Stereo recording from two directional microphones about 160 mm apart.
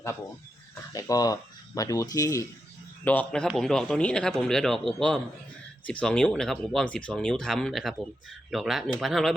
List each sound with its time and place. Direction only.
0.9 s a man's voice: 20° left (ahead or behind); by 9.3 s centre (ahead or behind)